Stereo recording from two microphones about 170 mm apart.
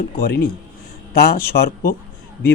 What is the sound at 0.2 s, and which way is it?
Speech, 65° left (ahead or behind).